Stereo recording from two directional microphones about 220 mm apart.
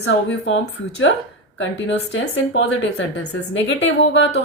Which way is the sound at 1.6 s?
55° left (ahead or behind).